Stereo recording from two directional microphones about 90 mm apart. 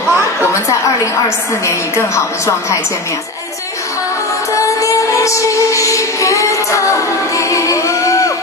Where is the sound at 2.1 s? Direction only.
35° left (ahead or behind).